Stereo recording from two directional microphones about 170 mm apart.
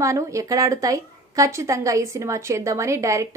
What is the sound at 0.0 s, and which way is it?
A woman's voice, 20° right (ahead or behind).